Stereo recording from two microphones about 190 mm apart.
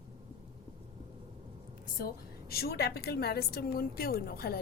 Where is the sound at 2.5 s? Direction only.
55° left (ahead or behind).